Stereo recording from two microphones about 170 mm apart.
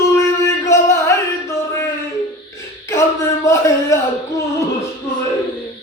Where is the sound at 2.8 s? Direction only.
15° left (ahead or behind).